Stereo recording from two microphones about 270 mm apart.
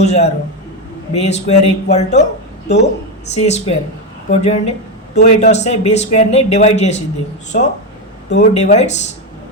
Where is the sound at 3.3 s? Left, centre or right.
Left.